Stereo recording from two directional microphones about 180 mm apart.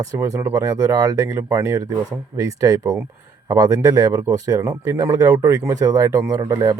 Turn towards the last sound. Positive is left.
turn(degrees=-20)  # may be behind; listen again after turning